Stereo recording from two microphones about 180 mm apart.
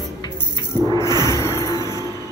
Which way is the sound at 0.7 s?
20° right (ahead or behind).